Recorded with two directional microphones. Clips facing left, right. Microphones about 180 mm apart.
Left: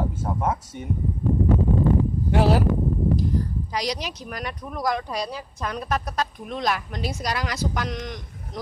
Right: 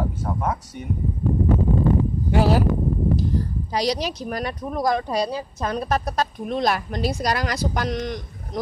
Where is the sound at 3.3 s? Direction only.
30° right (ahead or behind).